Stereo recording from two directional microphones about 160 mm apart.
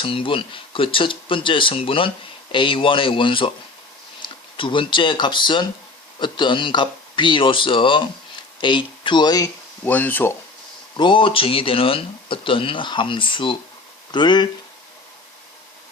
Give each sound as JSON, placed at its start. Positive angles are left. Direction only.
{"t": 0.0, "sound": "speech", "side_deg": 35}
{"t": 9.9, "sound": "speech", "side_deg": 10}
{"t": 10.9, "sound": "speech", "side_deg": 30}